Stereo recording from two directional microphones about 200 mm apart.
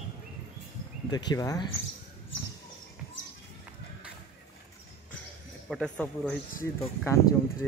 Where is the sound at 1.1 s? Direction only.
20° left (ahead or behind).